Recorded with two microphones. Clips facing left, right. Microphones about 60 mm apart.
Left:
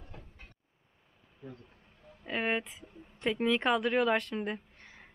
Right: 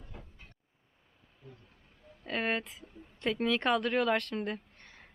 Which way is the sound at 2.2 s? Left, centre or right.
Centre.